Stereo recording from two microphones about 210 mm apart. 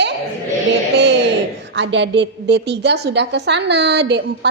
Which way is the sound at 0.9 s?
55° right (ahead or behind).